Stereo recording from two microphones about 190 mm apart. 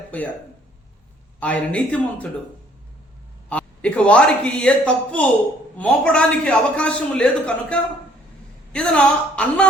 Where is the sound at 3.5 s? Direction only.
5° left (ahead or behind).